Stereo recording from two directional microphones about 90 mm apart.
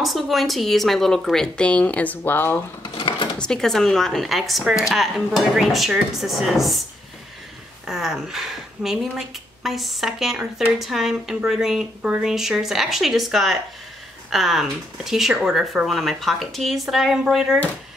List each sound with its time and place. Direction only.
0.0 s a woman's voice: centre (ahead or behind); by 2.6 s 25° left (ahead or behind)
2.8 s sewing machine: 80° left
3.3 s a woman's voice: 10° left (ahead or behind)
7.8 s a woman's voice: 5° right (ahead or behind)